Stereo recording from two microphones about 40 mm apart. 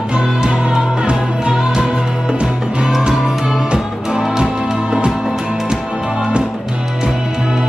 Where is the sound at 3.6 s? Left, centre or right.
Right.